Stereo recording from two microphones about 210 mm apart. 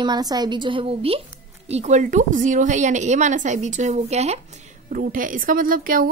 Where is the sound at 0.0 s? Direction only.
20° right (ahead or behind).